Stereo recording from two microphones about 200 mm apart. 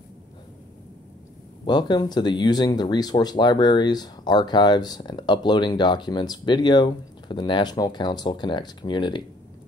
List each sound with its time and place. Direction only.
1.7 s speech: 20° left (ahead or behind)